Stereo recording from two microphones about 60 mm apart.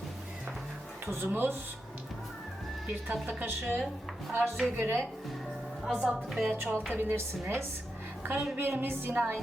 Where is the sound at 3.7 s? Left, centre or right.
Centre.